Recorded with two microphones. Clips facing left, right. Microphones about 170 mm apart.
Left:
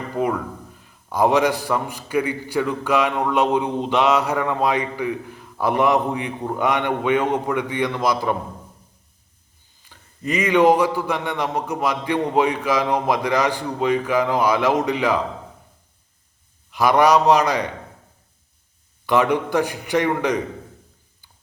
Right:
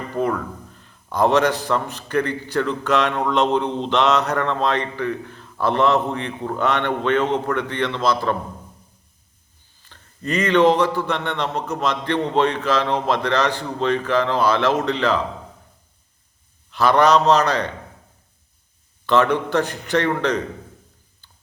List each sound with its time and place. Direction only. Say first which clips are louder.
0.1 s a man's voice: even; 10° left (ahead or behind)
9.9 s a man's voice: even; 10° left (ahead or behind)
16.7 s a man's voice: even; 10° left (ahead or behind)
19.0 s a man's voice: right 1 dB; 15° left (ahead or behind)